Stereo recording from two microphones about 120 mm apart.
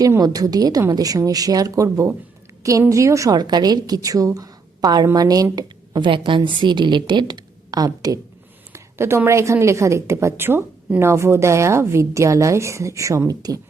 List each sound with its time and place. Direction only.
0.2 s a woman's voice: 30° right (ahead or behind)